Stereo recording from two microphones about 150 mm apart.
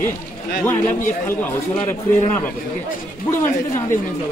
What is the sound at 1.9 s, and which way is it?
A man's voice, 10° left (ahead or behind).